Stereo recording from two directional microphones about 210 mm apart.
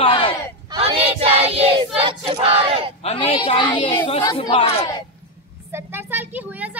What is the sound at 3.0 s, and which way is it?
Speech, 30° left (ahead or behind).